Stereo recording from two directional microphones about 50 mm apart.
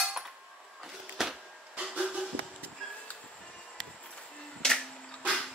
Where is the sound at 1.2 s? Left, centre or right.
Centre.